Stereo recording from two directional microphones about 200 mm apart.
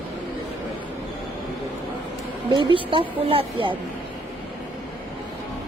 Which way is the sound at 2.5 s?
25° right (ahead or behind).